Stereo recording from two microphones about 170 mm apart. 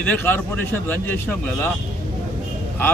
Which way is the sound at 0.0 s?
10° left (ahead or behind).